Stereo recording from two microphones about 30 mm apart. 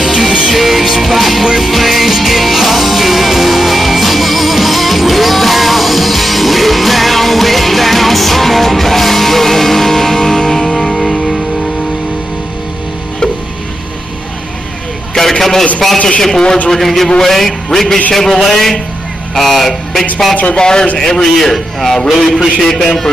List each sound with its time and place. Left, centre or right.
0.0 s music: centre
15.1 s a sound: centre
16.2 s a man's voice: centre
20.5 s a man's voice: left
21.1 s a man's voice: centre